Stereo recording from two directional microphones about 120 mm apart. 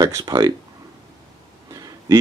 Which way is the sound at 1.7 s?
30° right (ahead or behind).